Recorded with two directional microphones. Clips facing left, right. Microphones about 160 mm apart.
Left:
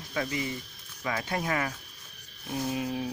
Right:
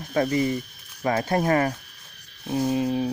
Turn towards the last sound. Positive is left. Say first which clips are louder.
# right 8 dB
turn(degrees=-30)  # may be behind; listen again after turning